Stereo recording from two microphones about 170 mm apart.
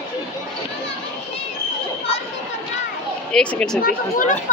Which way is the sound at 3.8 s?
50° left (ahead or behind).